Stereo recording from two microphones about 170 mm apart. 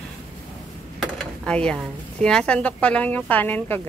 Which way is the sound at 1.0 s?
5° left (ahead or behind).